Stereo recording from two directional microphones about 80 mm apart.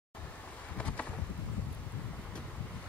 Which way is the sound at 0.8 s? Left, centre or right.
Centre.